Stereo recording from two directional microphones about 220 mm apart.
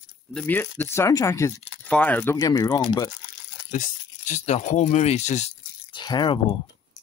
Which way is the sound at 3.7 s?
35° left (ahead or behind).